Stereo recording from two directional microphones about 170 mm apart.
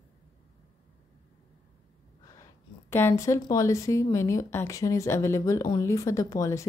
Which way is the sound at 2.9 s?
15° left (ahead or behind).